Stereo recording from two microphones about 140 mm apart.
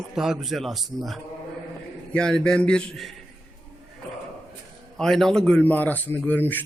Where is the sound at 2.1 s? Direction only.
5° left (ahead or behind).